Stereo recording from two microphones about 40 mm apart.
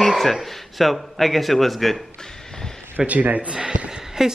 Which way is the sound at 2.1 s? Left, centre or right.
Centre.